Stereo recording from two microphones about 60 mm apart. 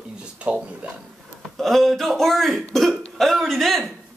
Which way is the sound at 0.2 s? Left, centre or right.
Centre.